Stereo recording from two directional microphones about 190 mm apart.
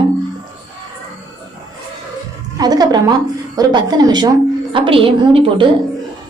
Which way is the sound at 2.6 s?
20° right (ahead or behind).